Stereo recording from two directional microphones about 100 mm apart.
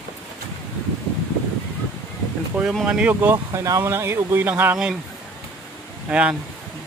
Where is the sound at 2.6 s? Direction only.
5° right (ahead or behind).